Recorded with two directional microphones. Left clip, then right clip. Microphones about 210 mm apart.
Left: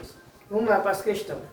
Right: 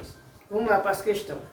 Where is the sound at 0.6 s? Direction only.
25° right (ahead or behind).